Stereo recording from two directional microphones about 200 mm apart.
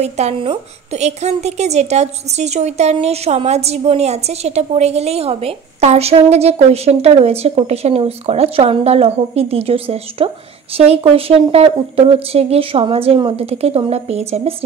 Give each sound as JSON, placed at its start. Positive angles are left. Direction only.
{"t": 0.0, "sound": "a woman's voice", "side_deg": -30}